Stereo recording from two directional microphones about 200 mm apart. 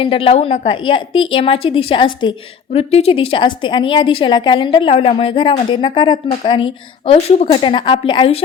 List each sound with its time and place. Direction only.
0.0 s a woman's voice: 30° left (ahead or behind)